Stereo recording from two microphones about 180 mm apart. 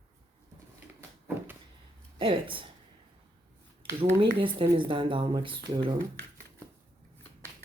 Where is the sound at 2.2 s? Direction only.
30° right (ahead or behind).